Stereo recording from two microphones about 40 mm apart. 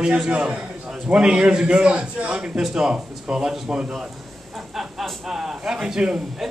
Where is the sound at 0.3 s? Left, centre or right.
Right.